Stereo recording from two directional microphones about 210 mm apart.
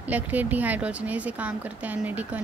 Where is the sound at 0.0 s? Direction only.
10° right (ahead or behind).